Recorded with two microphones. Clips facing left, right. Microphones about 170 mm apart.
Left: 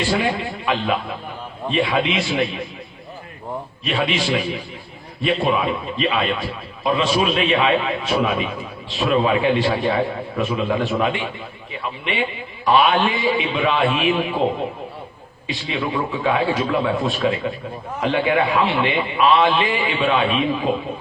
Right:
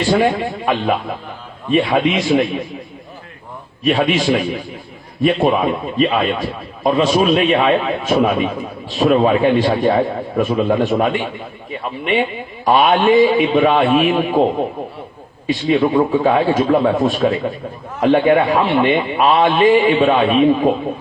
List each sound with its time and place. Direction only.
0.1 s a man's voice: 45° right (ahead or behind)
3.8 s a man's voice: 45° right (ahead or behind)
15.4 s a man's voice: 45° right (ahead or behind)